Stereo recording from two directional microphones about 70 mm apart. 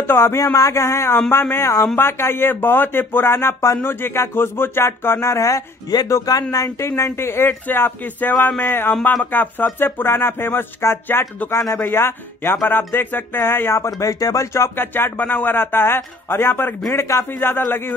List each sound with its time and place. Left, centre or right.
0.0 s speech: left
0.4 s speech: left
7.1 s speech: left
13.8 s speech: left